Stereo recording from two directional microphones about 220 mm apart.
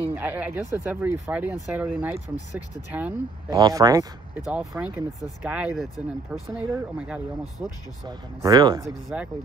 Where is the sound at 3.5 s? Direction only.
15° right (ahead or behind).